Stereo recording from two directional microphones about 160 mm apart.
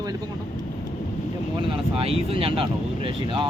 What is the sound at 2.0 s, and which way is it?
Speech, 35° right (ahead or behind).